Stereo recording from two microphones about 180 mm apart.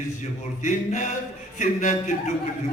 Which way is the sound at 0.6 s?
45° left (ahead or behind).